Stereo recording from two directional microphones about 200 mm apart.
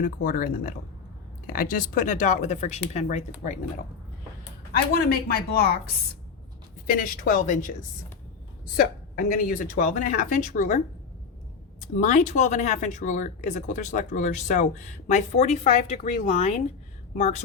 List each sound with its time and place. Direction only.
0.0 s a woman's voice: 45° left (ahead or behind)
4.7 s a woman's voice: 50° left (ahead or behind)
8.7 s speech: 45° left (ahead or behind)
11.9 s speech: 40° left (ahead or behind)